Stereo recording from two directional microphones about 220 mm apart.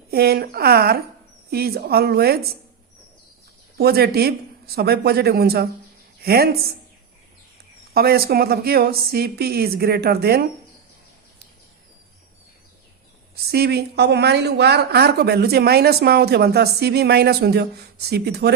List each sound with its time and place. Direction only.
0.1 s a woman's voice: 45° right (ahead or behind)
3.8 s a woman's voice: 45° right (ahead or behind)
7.9 s a woman's voice: 45° right (ahead or behind)
13.3 s a woman's voice: 45° right (ahead or behind)